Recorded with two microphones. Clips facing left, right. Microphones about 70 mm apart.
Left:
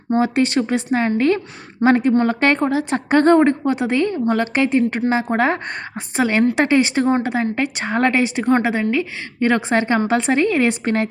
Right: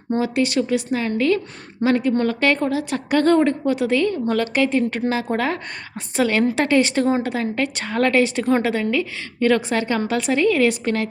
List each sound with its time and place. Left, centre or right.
0.2 s a woman's voice: left